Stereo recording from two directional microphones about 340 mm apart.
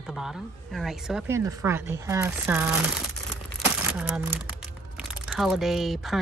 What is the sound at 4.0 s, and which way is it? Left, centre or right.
Speech, centre.